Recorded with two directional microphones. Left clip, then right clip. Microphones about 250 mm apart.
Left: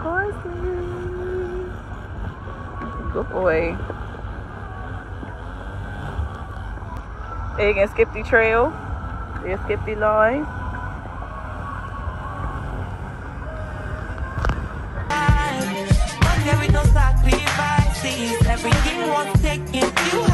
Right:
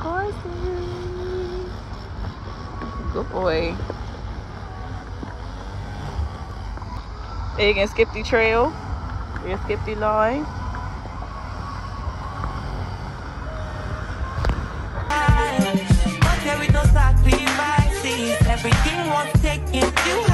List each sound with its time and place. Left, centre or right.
3.2 s speech: centre
7.5 s speech: right
9.5 s speech: centre
15.0 s music: centre